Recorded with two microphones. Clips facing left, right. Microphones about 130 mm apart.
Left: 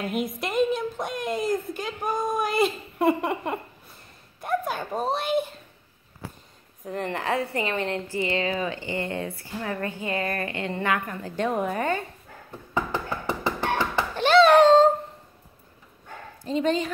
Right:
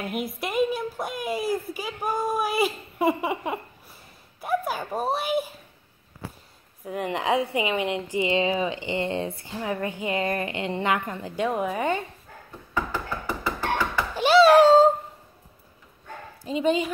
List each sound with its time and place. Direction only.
0.0 s a woman's voice: 5° right (ahead or behind)
6.8 s a woman's voice: 10° right (ahead or behind)
11.4 s a woman's voice: 5° right (ahead or behind)
12.7 s a sound: 20° left (ahead or behind)
14.1 s a sound: 10° right (ahead or behind)
16.4 s a woman's voice: 10° right (ahead or behind)